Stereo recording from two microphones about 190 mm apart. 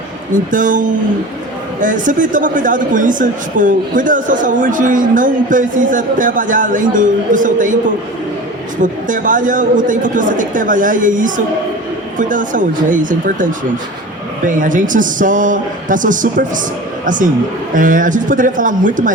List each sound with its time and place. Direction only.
0.5 s a man's voice: 45° right (ahead or behind)
8.8 s a man's voice: 45° right (ahead or behind)
17.7 s a man's voice: 45° right (ahead or behind)